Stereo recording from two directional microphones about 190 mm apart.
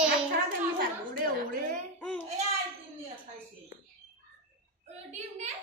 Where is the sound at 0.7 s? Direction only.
50° right (ahead or behind).